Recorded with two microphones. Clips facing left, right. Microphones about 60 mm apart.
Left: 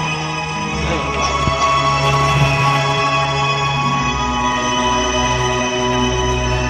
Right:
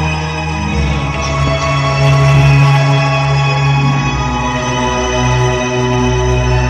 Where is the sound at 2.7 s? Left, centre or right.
Right.